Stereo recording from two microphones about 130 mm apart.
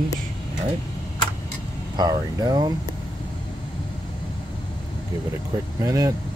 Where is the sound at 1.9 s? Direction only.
30° right (ahead or behind).